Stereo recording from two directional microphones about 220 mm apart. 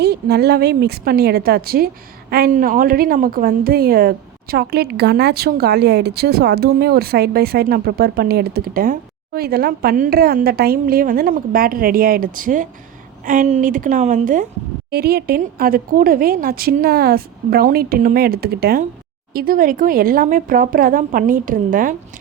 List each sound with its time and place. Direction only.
0.0 s a woman's voice: 45° right (ahead or behind)
14.8 s a woman's voice: 45° right (ahead or behind)